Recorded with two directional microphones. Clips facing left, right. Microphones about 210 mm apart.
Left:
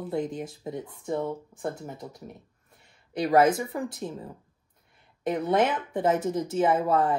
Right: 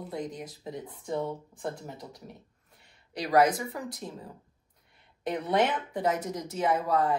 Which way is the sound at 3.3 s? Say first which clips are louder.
Left 2 dB; 25° left (ahead or behind).